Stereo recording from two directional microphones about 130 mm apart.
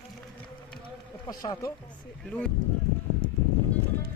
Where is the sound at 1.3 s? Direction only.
30° left (ahead or behind).